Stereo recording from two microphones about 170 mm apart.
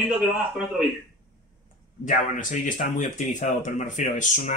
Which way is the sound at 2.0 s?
45° left (ahead or behind).